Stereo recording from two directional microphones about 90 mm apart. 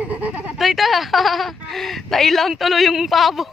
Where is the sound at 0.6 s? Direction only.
Centre (ahead or behind).